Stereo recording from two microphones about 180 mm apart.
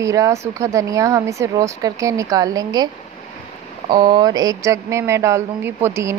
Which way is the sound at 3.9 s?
25° right (ahead or behind).